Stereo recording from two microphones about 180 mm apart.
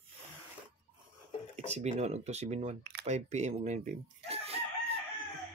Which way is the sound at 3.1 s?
40° right (ahead or behind).